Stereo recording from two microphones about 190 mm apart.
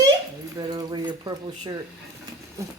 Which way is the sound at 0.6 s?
20° right (ahead or behind).